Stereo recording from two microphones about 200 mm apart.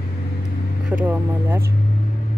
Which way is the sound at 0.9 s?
10° right (ahead or behind).